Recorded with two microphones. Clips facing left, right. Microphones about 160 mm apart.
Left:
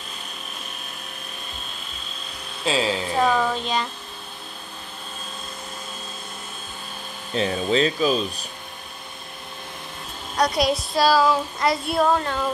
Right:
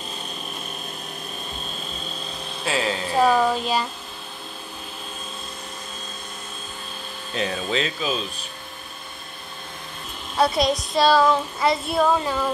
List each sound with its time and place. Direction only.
2.6 s speech: 15° left (ahead or behind)
3.2 s speech: 10° right (ahead or behind)
7.3 s speech: 30° left (ahead or behind)
10.3 s a woman's voice: 5° right (ahead or behind)
10.7 s child singing: 20° right (ahead or behind)
11.0 s child singing: centre (ahead or behind)